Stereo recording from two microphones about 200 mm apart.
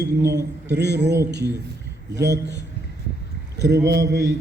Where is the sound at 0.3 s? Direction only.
60° right (ahead or behind).